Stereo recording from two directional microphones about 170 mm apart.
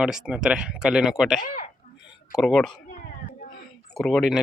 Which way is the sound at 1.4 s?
50° left (ahead or behind).